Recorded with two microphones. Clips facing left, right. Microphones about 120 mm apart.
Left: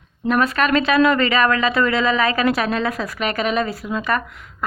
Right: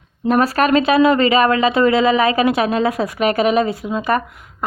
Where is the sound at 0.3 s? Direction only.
35° right (ahead or behind).